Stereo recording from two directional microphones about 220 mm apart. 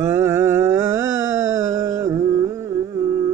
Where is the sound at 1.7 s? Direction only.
15° right (ahead or behind).